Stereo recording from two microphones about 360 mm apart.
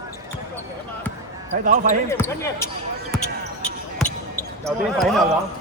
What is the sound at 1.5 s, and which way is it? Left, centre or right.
Speech, right.